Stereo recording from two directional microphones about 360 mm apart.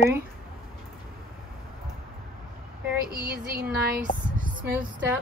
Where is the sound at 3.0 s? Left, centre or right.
Right.